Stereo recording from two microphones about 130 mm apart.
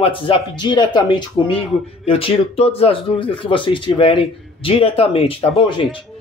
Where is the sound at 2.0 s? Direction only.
50° left (ahead or behind).